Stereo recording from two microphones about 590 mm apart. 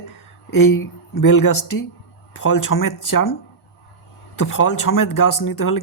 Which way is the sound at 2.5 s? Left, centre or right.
Left.